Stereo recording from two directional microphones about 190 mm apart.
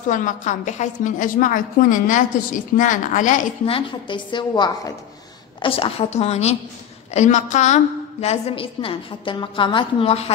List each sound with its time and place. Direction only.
0.1 s a woman's voice: 40° left (ahead or behind)
3.7 s a woman's voice: 25° left (ahead or behind)